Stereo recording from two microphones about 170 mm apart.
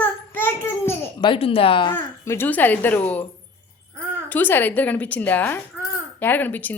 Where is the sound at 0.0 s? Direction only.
10° left (ahead or behind).